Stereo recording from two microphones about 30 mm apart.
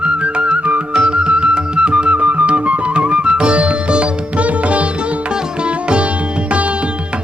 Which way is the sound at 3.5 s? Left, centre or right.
Right.